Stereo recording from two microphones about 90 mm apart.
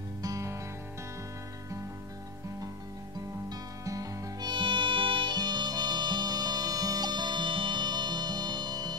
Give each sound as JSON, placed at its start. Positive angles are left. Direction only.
{"t": 0.2, "sound": "music", "side_deg": -35}
{"t": 3.4, "sound": "music", "side_deg": -40}
{"t": 4.5, "sound": "music", "side_deg": -65}